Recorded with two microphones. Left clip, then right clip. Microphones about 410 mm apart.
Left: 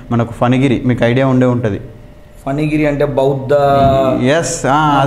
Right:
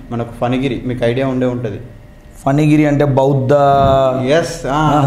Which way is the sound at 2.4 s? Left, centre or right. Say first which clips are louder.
Right 3 dB; right.